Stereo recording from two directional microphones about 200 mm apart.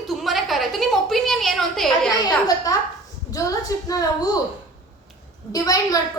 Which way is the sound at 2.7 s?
20° left (ahead or behind).